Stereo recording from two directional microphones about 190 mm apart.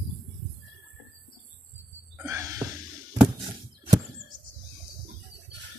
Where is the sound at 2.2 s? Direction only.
15° right (ahead or behind).